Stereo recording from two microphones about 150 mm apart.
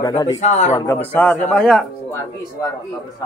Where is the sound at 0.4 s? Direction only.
50° left (ahead or behind).